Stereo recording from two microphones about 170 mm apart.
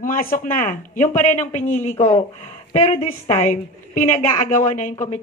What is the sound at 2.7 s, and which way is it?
Speech, 35° left (ahead or behind).